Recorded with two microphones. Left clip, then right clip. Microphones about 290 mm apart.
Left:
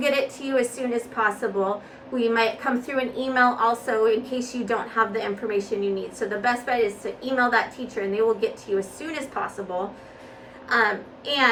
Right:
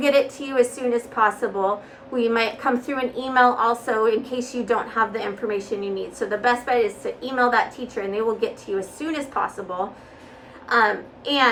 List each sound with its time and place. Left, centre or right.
0.0 s a woman's voice: centre
10.7 s a woman's voice: centre